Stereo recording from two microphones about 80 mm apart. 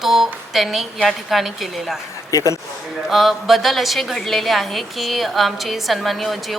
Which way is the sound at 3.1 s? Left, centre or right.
Centre.